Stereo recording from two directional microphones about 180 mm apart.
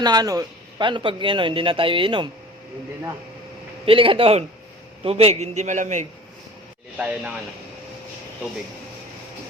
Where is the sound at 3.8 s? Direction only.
30° right (ahead or behind).